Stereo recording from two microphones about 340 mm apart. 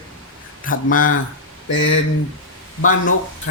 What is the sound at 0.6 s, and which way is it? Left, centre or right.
Speech, left.